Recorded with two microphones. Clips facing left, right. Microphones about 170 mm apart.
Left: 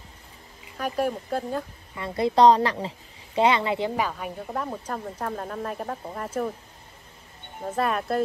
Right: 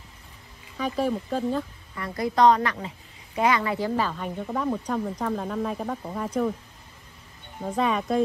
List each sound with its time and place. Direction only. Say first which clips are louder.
0.7 s speech: right 1 dB; 10° left (ahead or behind)
2.0 s a woman's voice: left 3 dB; 25° left (ahead or behind); by 6.5 s 5° left (ahead or behind)
7.6 s speech: right 1 dB; 5° left (ahead or behind)